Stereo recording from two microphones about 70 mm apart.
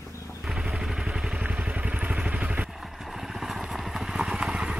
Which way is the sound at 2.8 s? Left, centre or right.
Centre.